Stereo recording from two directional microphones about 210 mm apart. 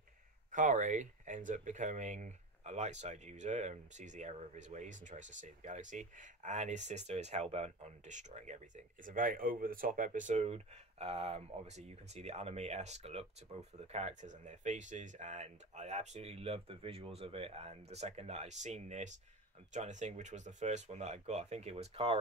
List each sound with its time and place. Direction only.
0.5 s speech: 40° right (ahead or behind)